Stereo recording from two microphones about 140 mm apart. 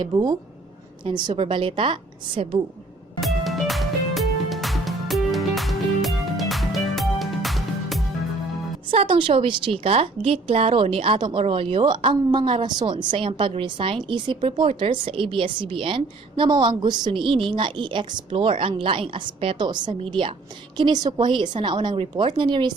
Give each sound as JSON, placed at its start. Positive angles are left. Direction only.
{"t": 0.0, "sound": "a woman's voice", "side_deg": -30}
{"t": 3.2, "sound": "music", "side_deg": 0}
{"t": 8.9, "sound": "a woman's voice", "side_deg": -40}